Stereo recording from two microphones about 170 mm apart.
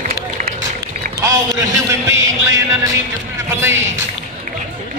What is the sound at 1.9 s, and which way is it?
Music, 15° right (ahead or behind).